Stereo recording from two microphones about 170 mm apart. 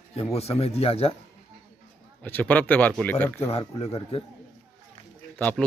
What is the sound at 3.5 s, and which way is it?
Speech, 40° left (ahead or behind).